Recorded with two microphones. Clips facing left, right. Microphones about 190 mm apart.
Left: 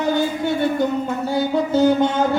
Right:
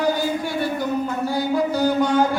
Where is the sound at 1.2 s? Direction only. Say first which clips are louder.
Left 1 dB; 25° left (ahead or behind).